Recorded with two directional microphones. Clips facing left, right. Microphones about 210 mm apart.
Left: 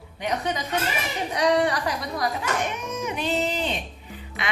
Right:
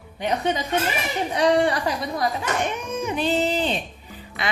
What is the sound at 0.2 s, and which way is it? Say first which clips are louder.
A woman's voice: right 3 dB; 30° right (ahead or behind).